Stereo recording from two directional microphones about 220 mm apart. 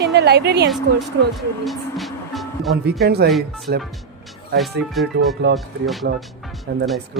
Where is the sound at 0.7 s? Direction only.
Centre (ahead or behind).